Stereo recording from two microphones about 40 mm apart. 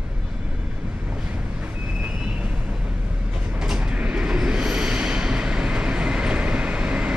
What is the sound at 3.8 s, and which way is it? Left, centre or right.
Train, right.